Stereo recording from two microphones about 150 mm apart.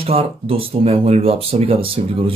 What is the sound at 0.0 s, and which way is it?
Speech, 40° right (ahead or behind).